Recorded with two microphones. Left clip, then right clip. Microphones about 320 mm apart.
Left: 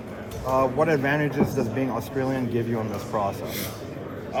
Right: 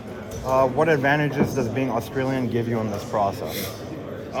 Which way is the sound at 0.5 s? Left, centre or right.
Right.